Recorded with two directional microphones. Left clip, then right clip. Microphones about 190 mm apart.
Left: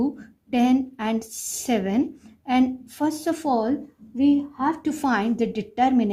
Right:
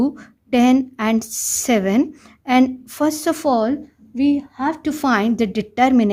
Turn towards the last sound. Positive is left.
turn(degrees=-55)  # may be behind; listen again after turning